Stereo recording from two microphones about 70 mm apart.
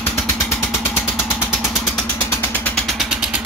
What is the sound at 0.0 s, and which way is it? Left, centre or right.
Vehicle, left.